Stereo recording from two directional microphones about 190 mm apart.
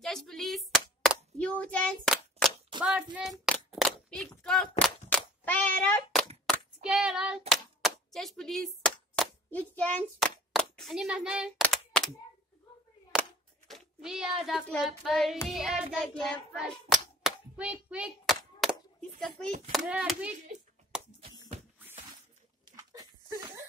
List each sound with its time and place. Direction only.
0.0 s a sound: centre (ahead or behind)
6.4 s hands: centre (ahead or behind)
9.1 s a child's voice: 5° left (ahead or behind)
11.6 s a sound: 5° left (ahead or behind)
13.7 s child singing: centre (ahead or behind)
15.4 s speech: centre (ahead or behind)
15.9 s hands: 5° left (ahead or behind)
19.7 s speech: 5° right (ahead or behind)
22.7 s a sound: 20° right (ahead or behind)